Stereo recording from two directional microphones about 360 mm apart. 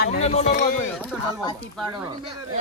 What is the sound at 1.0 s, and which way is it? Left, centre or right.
Speech, centre.